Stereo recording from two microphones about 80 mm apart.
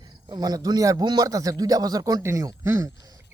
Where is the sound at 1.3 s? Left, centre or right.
Right.